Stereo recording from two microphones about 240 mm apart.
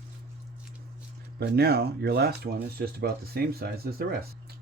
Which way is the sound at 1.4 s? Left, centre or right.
Right.